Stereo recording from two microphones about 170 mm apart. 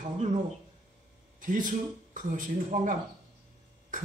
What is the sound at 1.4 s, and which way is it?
A man's voice, 50° right (ahead or behind).